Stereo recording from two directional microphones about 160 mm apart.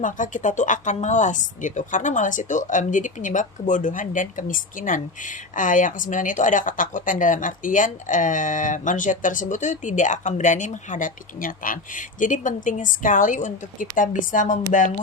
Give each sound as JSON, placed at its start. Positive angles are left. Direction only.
{"t": 0.0, "sound": "speech", "side_deg": 50}